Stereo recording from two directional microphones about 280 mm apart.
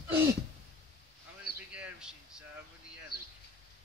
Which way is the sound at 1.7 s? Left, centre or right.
Centre.